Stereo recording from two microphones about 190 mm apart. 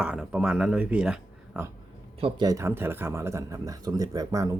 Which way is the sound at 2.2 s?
20° right (ahead or behind).